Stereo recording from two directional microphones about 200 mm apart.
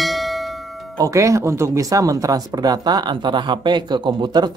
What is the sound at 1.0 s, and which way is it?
Speech, 15° right (ahead or behind).